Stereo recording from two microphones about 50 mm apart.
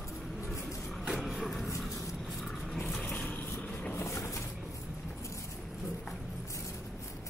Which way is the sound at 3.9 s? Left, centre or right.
Left.